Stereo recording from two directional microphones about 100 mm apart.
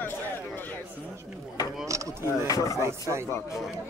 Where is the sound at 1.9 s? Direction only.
30° right (ahead or behind).